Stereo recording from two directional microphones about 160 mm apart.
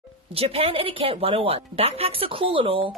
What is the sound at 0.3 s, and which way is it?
Speech, 35° right (ahead or behind).